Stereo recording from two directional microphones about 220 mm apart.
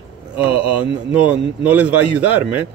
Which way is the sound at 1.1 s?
5° right (ahead or behind).